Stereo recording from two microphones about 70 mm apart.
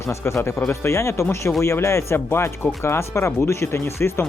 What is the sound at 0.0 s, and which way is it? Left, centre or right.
Speech, left.